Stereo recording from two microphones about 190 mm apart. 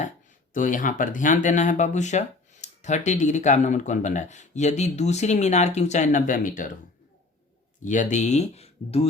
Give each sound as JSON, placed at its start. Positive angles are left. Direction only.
{"t": 0.5, "sound": "speech", "side_deg": 45}
{"t": 7.9, "sound": "speech", "side_deg": 40}